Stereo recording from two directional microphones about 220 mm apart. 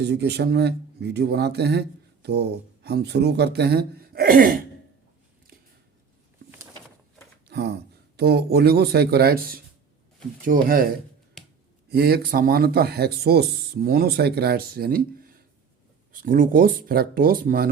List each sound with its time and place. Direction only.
0.0 s speech: 50° right (ahead or behind)
7.4 s speech: 50° right (ahead or behind)